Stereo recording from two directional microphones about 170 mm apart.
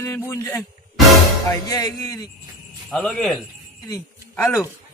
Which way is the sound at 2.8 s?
5° left (ahead or behind).